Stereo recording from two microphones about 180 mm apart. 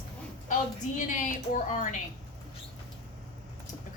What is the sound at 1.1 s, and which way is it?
Speech, 45° left (ahead or behind).